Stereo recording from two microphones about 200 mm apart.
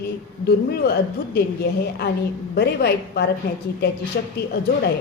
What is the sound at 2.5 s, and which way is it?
A woman's voice, 55° left (ahead or behind).